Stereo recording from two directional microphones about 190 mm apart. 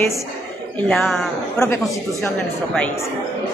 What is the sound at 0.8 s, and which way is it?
Speech, centre (ahead or behind).